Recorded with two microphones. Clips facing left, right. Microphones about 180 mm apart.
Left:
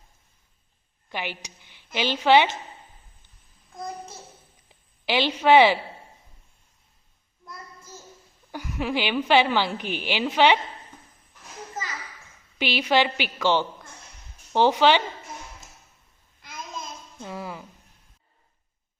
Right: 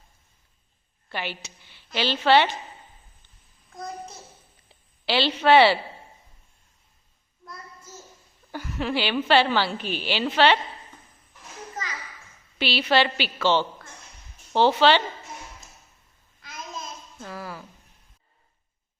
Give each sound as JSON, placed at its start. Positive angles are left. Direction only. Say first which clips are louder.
{"t": 1.1, "sound": "a woman's voice", "louder": "even", "side_deg": 15}
{"t": 4.7, "sound": "a woman's voice", "louder": "even", "side_deg": 15}
{"t": 8.5, "sound": "a woman's voice", "louder": "even", "side_deg": 10}
{"t": 12.5, "sound": "a woman's voice", "louder": "even", "side_deg": 15}
{"t": 17.2, "sound": "speech", "louder": "left 2 dB", "side_deg": 20}